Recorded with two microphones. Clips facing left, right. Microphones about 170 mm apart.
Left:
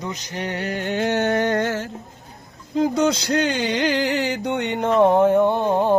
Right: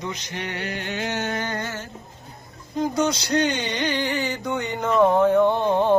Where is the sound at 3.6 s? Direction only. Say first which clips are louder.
Left 5 dB; 90° left; by 4.9 s 65° left (ahead or behind).